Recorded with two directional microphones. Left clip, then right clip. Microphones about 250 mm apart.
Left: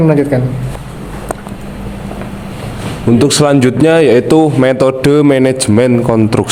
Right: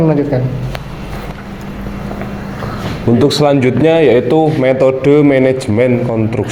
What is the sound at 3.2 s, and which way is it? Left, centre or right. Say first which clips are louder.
A man's voice: left 1 dB; left.